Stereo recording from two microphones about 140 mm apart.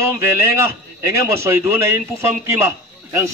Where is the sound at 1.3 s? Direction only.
20° right (ahead or behind).